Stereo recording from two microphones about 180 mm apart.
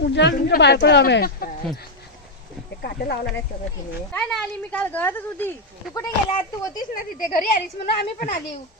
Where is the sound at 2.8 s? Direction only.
65° left (ahead or behind).